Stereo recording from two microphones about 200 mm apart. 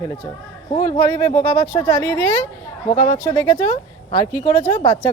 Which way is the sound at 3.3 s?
15° left (ahead or behind).